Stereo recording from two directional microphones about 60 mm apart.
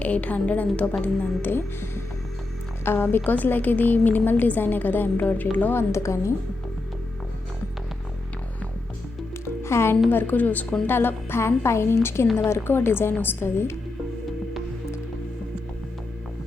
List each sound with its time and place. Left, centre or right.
0.0 s a woman's voice: left
5.7 s a woman's voice: left
9.6 s a woman's voice: left
10.1 s a woman's voice: left